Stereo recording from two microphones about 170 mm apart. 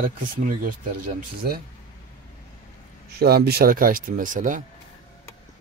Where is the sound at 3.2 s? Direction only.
65° right (ahead or behind); by 4.6 s 50° right (ahead or behind).